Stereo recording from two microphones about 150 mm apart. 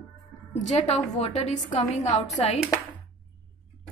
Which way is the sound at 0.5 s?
50° left (ahead or behind).